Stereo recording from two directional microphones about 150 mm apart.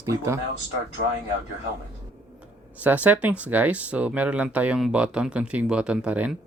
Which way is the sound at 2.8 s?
10° right (ahead or behind).